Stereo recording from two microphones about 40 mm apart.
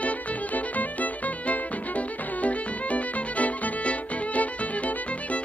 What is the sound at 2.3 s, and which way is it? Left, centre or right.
Violin, left.